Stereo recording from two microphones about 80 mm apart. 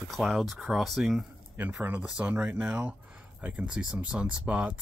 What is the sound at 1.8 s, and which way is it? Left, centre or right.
Speech, right.